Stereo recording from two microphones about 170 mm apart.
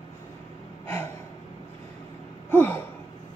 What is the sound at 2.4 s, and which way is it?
Gasp, 15° left (ahead or behind).